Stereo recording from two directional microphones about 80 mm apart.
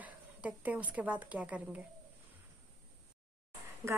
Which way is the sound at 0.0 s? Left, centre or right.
Centre.